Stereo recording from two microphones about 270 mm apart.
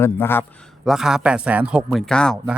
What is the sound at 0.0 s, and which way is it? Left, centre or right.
Speech, centre.